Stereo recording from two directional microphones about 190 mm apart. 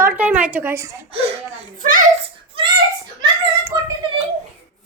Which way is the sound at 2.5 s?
30° right (ahead or behind).